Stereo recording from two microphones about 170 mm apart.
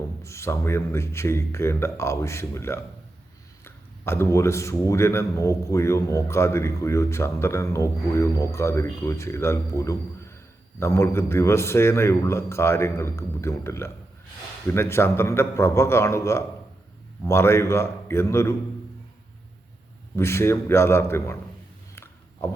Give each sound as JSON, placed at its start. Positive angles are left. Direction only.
{"t": 0.2, "sound": "a man's voice", "side_deg": 15}
{"t": 20.1, "sound": "a man's voice", "side_deg": 15}
{"t": 21.9, "sound": "a sound", "side_deg": 15}